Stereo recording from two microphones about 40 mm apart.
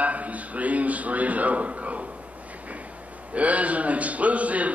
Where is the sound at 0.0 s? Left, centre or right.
Right.